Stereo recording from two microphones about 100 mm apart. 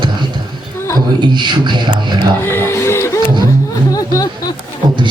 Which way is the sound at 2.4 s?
25° left (ahead or behind).